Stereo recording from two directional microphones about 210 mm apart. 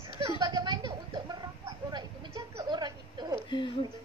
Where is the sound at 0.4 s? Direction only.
20° right (ahead or behind).